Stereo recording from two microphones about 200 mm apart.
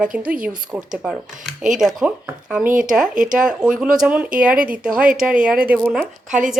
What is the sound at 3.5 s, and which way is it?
Speech, 5° right (ahead or behind).